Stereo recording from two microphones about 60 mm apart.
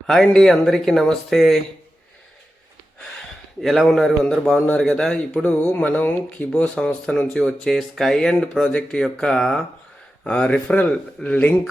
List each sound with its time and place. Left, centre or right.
0.1 s speech: centre
3.6 s speech: centre; by 11.5 s left